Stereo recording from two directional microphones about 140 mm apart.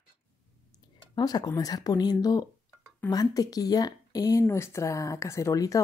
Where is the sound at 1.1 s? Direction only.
30° left (ahead or behind).